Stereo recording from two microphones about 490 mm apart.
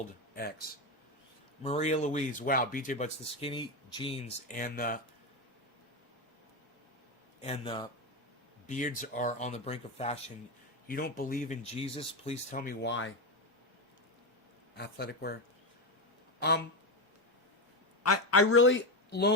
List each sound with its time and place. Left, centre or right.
1.6 s speech: centre
7.4 s speech: centre
14.8 s speech: centre
18.0 s speech: left